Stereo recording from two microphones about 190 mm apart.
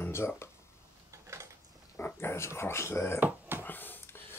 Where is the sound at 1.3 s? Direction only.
15° right (ahead or behind).